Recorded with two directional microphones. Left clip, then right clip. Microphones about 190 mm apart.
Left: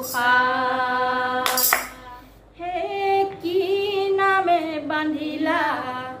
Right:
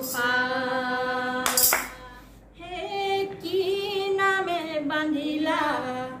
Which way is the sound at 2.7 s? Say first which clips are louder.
Left 6 dB; 30° right (ahead or behind).